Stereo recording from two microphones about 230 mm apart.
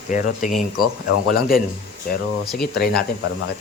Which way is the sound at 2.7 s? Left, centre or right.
Left.